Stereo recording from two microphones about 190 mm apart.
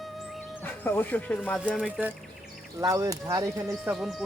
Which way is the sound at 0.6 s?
10° left (ahead or behind).